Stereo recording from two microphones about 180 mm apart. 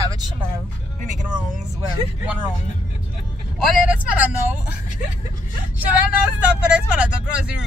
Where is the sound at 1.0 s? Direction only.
45° right (ahead or behind).